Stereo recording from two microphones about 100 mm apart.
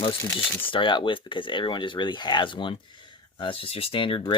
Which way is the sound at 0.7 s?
55° left (ahead or behind).